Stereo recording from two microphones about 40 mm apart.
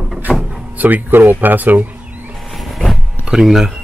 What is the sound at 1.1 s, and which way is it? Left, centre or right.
Speech, right.